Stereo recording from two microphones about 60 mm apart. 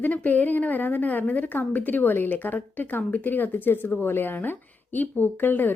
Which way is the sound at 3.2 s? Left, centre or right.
Left.